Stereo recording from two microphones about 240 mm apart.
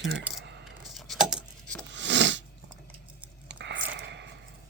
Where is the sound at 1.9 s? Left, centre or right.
Right.